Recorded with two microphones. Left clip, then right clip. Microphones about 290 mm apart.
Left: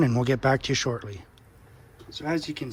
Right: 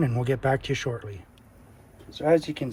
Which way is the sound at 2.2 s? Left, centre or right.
Centre.